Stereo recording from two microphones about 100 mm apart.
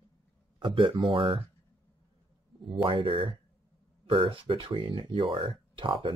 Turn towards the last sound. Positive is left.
turn(degrees=-60)  # may be behind; listen again after turning